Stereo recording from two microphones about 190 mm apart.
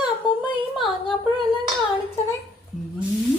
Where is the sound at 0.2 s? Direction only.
25° left (ahead or behind).